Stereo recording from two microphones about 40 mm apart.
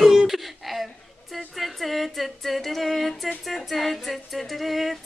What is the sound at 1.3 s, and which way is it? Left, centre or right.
Music, centre.